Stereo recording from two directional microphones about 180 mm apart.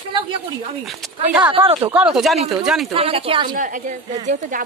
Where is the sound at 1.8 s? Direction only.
5° right (ahead or behind).